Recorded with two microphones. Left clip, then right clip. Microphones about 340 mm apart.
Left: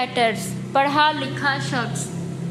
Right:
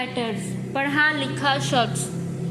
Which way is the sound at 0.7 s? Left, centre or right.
Left.